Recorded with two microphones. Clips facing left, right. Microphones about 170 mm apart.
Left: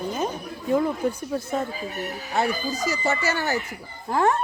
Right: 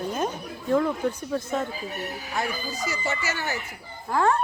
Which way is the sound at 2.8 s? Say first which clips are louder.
Left 5 dB; 40° left (ahead or behind).